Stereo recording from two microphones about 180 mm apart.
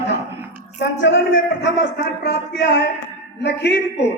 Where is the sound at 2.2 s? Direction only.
70° left (ahead or behind).